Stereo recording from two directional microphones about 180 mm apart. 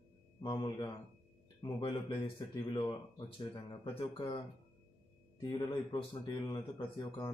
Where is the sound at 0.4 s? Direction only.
25° left (ahead or behind).